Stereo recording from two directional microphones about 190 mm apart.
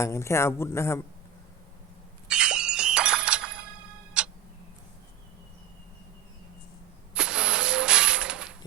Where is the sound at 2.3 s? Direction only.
5° right (ahead or behind).